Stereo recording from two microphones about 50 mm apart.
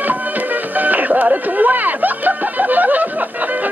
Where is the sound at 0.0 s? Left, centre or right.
Right.